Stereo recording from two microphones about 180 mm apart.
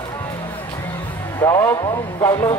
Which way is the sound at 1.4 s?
15° left (ahead or behind).